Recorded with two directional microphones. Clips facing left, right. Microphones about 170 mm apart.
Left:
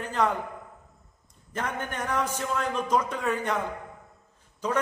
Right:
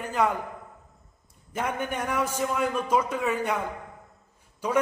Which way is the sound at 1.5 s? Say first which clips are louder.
Right 3 dB; 10° right (ahead or behind).